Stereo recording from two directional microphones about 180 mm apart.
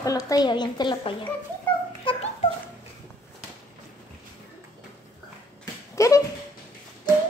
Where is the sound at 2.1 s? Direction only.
30° left (ahead or behind).